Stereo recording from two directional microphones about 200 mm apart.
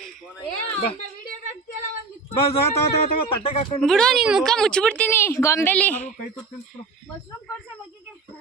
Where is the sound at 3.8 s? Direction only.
5° left (ahead or behind).